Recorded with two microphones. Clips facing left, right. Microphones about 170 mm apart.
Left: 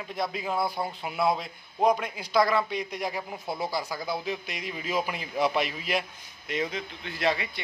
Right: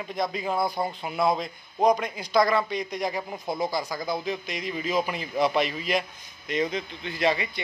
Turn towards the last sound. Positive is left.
turn(degrees=0)  # may be behind; listen again after turning